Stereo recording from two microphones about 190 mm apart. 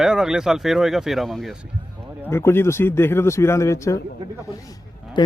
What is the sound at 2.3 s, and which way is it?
Speech, 15° left (ahead or behind).